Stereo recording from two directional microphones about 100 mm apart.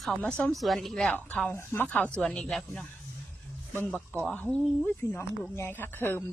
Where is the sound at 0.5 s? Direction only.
Centre (ahead or behind).